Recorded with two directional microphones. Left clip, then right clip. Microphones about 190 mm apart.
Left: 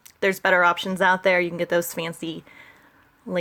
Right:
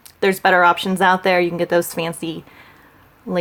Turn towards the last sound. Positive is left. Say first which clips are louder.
# right 4 dB
turn(degrees=15)  # may be behind; listen again after turning